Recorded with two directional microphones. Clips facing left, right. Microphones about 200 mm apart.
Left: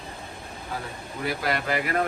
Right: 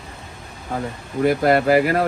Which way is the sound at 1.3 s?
45° right (ahead or behind).